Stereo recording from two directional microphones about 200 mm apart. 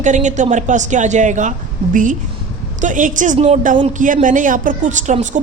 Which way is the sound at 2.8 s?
40° right (ahead or behind).